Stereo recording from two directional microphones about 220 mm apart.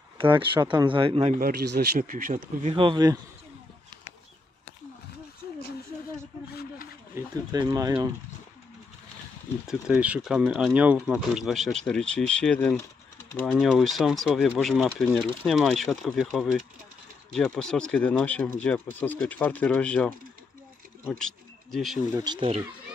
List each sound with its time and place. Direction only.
0.2 s speech: 25° right (ahead or behind)
1.4 s speech: 45° right (ahead or behind)
2.7 s speech: 20° right (ahead or behind)
7.2 s speech: 15° right (ahead or behind)
9.7 s speech: 5° right (ahead or behind)
22.2 s speech: 25° right (ahead or behind)